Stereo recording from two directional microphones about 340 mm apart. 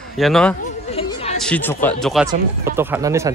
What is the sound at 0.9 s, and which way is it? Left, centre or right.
Chatter, centre.